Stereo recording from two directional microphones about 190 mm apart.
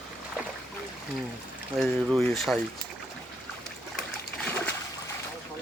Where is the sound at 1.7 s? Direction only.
Centre (ahead or behind).